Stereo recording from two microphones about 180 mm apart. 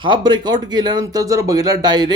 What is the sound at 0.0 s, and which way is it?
Speech, 25° right (ahead or behind).